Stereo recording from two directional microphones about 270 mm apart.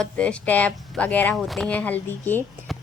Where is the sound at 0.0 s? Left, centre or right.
Centre.